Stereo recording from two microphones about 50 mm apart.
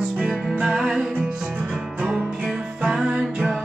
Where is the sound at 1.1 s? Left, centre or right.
Right.